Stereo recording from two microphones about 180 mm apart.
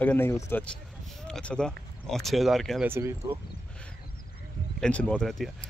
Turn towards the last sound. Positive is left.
turn(degrees=0)  # may be behind; listen again after turning